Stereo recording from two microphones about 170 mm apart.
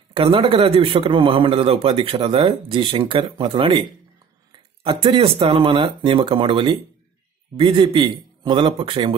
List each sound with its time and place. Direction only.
0.1 s a man's voice: 30° right (ahead or behind)